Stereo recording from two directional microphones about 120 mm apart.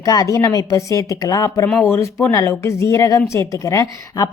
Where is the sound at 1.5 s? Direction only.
20° left (ahead or behind).